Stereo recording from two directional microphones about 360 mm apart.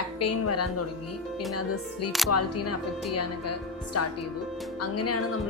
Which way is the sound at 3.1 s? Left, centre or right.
Left.